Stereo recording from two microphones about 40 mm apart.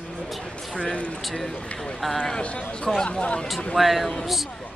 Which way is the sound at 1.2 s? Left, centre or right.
Centre.